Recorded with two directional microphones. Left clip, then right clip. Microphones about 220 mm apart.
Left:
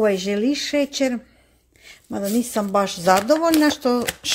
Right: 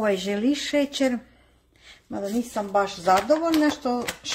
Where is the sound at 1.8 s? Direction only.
35° left (ahead or behind).